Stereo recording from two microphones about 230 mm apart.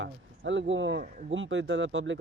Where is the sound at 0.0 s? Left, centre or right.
Right.